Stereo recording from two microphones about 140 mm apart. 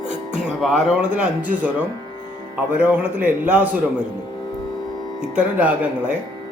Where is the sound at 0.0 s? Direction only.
60° right (ahead or behind).